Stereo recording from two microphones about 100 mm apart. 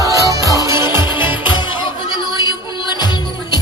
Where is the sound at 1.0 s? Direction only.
50° left (ahead or behind).